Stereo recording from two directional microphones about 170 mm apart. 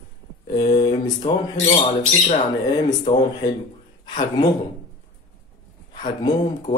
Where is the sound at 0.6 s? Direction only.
25° left (ahead or behind).